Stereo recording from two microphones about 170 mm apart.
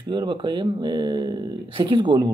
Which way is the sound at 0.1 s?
25° right (ahead or behind).